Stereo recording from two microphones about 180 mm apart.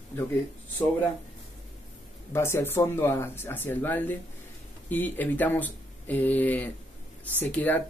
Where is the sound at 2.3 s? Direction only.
15° left (ahead or behind).